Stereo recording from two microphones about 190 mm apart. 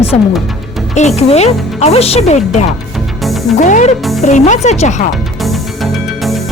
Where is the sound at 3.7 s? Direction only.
40° left (ahead or behind).